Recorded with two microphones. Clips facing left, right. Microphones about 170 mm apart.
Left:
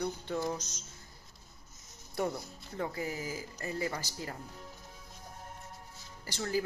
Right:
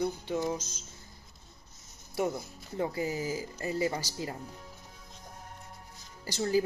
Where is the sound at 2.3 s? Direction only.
20° right (ahead or behind).